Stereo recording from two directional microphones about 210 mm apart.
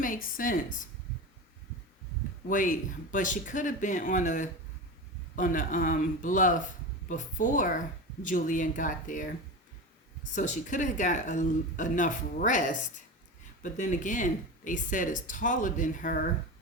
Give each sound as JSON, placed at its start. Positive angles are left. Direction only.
{"t": 0.0, "sound": "speech", "side_deg": 40}
{"t": 2.5, "sound": "speech", "side_deg": 40}
{"t": 10.3, "sound": "speech", "side_deg": 35}